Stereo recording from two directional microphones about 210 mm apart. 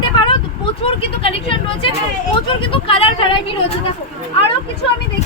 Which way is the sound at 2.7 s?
25° left (ahead or behind).